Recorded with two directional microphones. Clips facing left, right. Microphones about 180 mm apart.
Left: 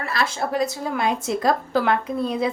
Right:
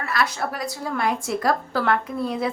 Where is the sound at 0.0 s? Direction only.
30° left (ahead or behind).